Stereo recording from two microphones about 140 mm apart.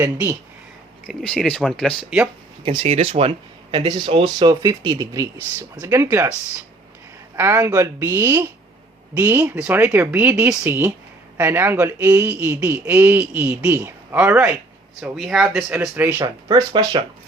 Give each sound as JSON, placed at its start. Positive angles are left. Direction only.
{"t": 1.0, "sound": "speech", "side_deg": 5}
{"t": 2.6, "sound": "a man's voice", "side_deg": -45}
{"t": 7.3, "sound": "a man's voice", "side_deg": -15}
{"t": 16.2, "sound": "speech", "side_deg": -30}